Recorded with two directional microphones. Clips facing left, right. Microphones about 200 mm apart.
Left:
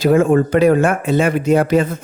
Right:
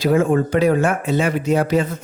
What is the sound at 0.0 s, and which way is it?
Speech, 55° left (ahead or behind).